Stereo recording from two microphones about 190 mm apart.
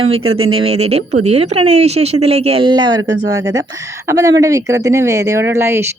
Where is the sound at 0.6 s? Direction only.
30° right (ahead or behind).